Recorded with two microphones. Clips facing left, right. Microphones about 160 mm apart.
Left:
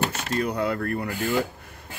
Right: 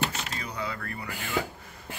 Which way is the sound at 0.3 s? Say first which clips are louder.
Left 10 dB; 55° left (ahead or behind).